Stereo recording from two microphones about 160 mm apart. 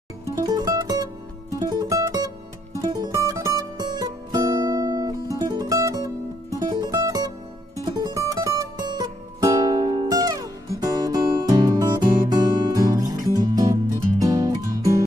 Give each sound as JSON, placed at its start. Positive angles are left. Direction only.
{"t": 0.2, "sound": "music", "side_deg": -20}